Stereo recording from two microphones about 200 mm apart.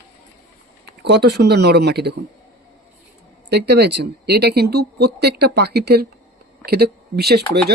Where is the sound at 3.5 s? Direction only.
55° right (ahead or behind).